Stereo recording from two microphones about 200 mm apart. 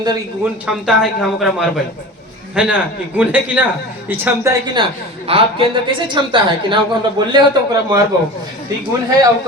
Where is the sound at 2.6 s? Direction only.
5° right (ahead or behind).